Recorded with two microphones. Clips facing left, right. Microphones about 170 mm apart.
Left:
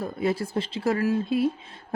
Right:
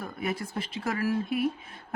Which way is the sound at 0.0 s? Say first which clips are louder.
Left 6 dB; 30° left (ahead or behind).